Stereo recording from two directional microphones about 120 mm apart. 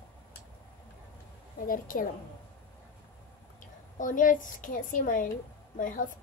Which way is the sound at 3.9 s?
90° left.